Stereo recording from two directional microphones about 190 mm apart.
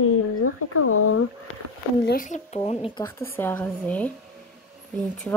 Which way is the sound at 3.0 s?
10° left (ahead or behind).